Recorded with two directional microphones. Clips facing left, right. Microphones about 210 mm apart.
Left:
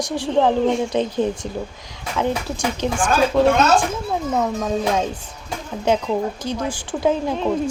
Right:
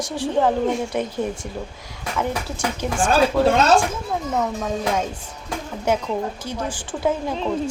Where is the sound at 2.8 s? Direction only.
20° left (ahead or behind).